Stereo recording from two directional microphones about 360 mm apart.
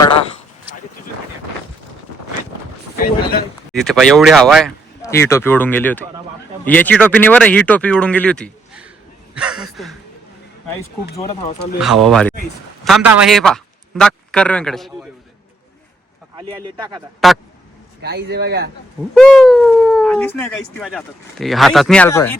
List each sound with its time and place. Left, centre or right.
3.0 s a sound: left
3.7 s speech: centre
9.3 s a sound: centre
11.8 s a man's voice: centre
16.3 s speech: centre
17.2 s speech: centre
18.0 s speech: right
19.1 s speech: centre